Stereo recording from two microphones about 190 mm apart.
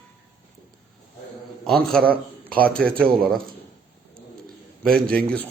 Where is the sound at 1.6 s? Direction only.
Centre (ahead or behind).